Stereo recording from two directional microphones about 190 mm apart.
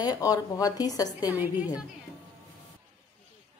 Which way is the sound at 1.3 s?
10° right (ahead or behind).